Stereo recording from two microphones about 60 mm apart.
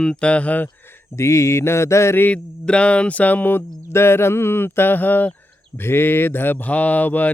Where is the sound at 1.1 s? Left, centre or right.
Left.